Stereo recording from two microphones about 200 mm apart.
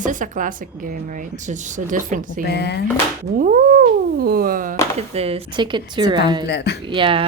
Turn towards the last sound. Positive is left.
turn(degrees=-25)  # may be behind; listen again after turning